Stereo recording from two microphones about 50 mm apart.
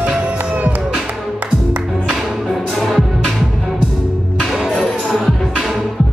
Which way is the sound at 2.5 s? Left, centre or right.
Centre.